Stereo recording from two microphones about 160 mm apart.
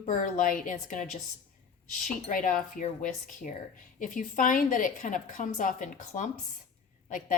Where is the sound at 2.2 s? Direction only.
55° left (ahead or behind).